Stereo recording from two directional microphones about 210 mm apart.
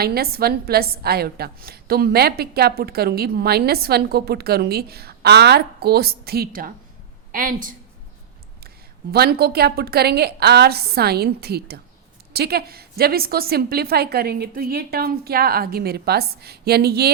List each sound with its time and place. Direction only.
0.0 s a woman's voice: 45° right (ahead or behind)
9.1 s a woman's voice: 50° right (ahead or behind)